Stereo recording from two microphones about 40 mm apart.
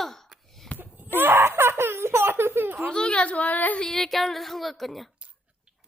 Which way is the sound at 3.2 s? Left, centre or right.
Left.